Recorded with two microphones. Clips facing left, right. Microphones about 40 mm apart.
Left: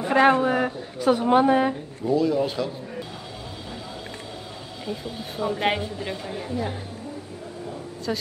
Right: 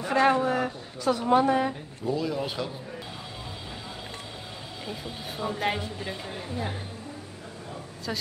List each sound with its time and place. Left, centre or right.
0.0 s a woman's voice: left
2.1 s speech: centre
4.8 s speech: centre
8.1 s speech: centre